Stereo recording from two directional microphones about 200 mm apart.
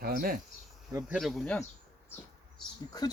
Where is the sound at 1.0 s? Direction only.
Centre (ahead or behind).